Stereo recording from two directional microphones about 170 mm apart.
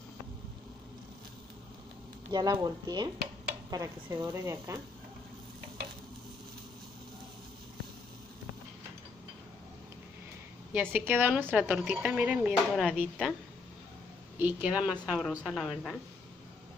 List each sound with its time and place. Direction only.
2.3 s a woman's voice: 20° right (ahead or behind)
10.7 s a woman's voice: 10° right (ahead or behind)
14.4 s a woman's voice: 10° right (ahead or behind)